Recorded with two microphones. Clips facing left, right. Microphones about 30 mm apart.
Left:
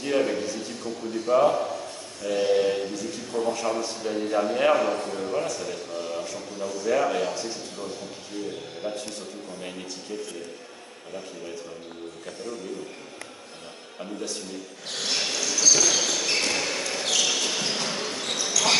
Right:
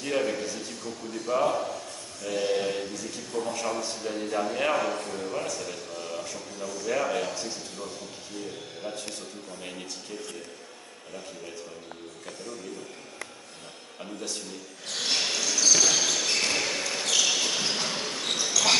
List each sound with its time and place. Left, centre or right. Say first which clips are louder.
0.0 s a man's voice: left 3 dB; centre
6.6 s a man's voice: left 4 dB; centre
6.9 s a man's voice: left 4 dB; centre
8.8 s a man's voice: left 5 dB; centre
9.6 s a man's voice: left 2 dB; centre
13.9 s a man's voice: left 3 dB; centre
15.0 s basketball bounce: even; centre